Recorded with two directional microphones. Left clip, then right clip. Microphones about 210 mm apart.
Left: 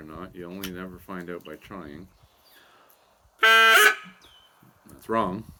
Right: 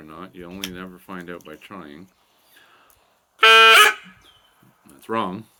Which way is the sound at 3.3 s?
25° right (ahead or behind).